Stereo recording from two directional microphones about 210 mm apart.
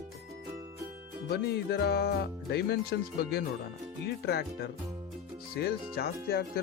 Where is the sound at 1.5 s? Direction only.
50° left (ahead or behind).